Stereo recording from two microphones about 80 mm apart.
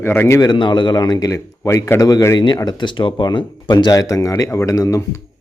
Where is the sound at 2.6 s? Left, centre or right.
Left.